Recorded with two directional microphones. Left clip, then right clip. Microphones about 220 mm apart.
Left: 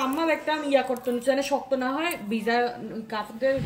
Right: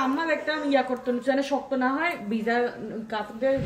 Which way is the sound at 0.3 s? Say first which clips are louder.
Left 1 dB; 25° left (ahead or behind).